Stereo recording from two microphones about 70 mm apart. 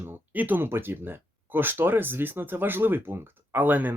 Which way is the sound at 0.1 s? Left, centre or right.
Right.